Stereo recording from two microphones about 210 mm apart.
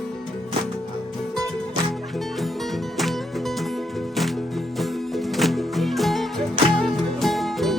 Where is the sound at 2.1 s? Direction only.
Centre (ahead or behind).